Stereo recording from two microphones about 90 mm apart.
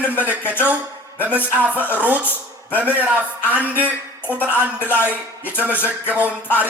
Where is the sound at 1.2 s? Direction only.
15° right (ahead or behind).